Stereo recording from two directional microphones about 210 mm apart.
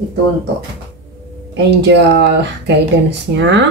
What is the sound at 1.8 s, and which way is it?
Speech, 55° right (ahead or behind).